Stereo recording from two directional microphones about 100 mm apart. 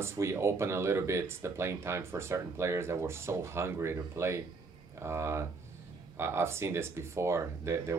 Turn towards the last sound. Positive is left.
turn(degrees=-30)  # may be behind; listen again after turning